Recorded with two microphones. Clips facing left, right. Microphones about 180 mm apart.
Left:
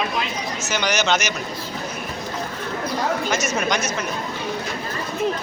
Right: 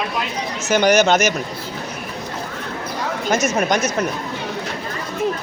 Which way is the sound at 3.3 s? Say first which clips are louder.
Right 4 dB; 50° right (ahead or behind).